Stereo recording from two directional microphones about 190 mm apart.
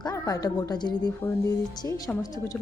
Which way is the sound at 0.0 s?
20° left (ahead or behind).